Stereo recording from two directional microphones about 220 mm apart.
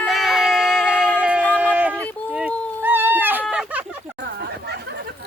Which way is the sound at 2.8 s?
10° right (ahead or behind).